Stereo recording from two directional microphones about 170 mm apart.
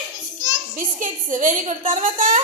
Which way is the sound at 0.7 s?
50° right (ahead or behind).